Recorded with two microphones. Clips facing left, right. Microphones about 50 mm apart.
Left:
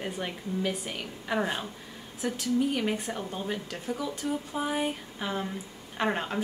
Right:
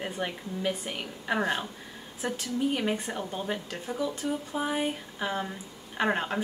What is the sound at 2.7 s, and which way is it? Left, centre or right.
Speech, centre.